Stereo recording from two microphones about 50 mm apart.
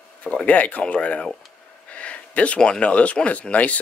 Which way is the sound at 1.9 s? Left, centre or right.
Left.